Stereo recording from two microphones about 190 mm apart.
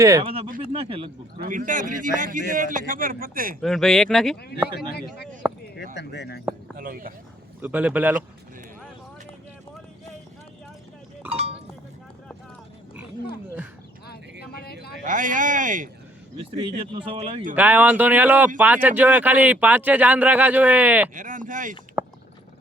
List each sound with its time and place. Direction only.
0.0 s speech: 15° right (ahead or behind)
0.7 s speech: 30° right (ahead or behind)
1.4 s speech: 45° right (ahead or behind)
3.6 s speech: centre (ahead or behind)
4.8 s speech: 55° left (ahead or behind)
6.7 s speech: 50° right (ahead or behind)
7.6 s speech: 10° right (ahead or behind)
11.3 s sheep: 35° right (ahead or behind)
14.4 s a sound: 55° left (ahead or behind)
15.0 s speech: 45° right (ahead or behind)
16.6 s speech: 30° right (ahead or behind)
17.5 s speech: 10° right (ahead or behind)
21.2 s speech: 45° right (ahead or behind)
22.0 s a sound: 10° right (ahead or behind)